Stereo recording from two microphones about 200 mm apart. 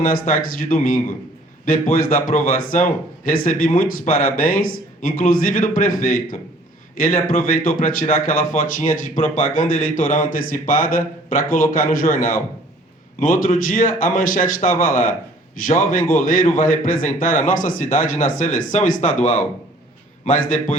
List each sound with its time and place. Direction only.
0.0 s a man's voice: 45° left (ahead or behind)